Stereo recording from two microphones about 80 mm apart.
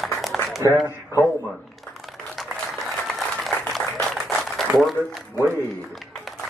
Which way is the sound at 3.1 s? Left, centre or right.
Centre.